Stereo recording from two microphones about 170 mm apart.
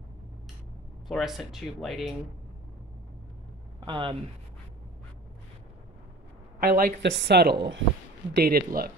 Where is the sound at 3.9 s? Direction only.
30° right (ahead or behind).